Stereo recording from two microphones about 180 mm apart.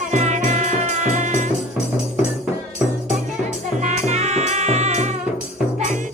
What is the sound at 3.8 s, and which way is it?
Music, 40° right (ahead or behind).